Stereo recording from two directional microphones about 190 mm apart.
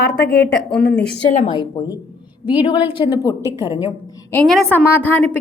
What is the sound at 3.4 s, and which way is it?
Speech, 15° right (ahead or behind).